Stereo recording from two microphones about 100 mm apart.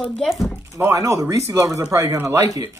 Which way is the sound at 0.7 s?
30° right (ahead or behind).